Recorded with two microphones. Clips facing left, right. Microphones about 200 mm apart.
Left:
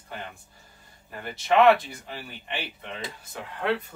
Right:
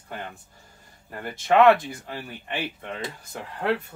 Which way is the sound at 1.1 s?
50° right (ahead or behind).